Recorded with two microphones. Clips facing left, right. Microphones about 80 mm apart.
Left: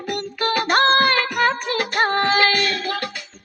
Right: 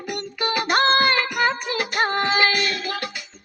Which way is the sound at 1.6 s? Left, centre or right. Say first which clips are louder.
Left 2 dB; left.